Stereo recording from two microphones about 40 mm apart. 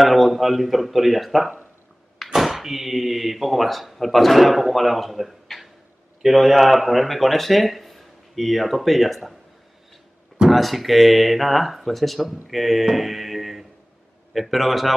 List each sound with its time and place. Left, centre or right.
0.0 s speech: centre
10.5 s speech: centre